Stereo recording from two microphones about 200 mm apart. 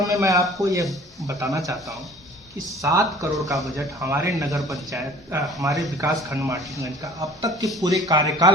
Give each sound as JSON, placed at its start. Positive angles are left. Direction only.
{"t": 0.0, "sound": "speech", "side_deg": -15}
{"t": 2.8, "sound": "speech", "side_deg": -15}
{"t": 3.3, "sound": "speech", "side_deg": 0}
{"t": 3.8, "sound": "speech", "side_deg": -15}